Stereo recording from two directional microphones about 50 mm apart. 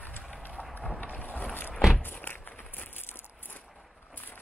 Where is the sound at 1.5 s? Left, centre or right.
Left.